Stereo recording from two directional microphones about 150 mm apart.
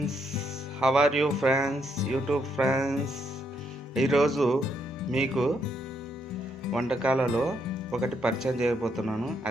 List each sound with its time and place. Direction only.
0.8 s speech: 5° right (ahead or behind)